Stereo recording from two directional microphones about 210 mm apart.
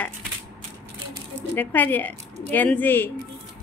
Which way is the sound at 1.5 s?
10° left (ahead or behind).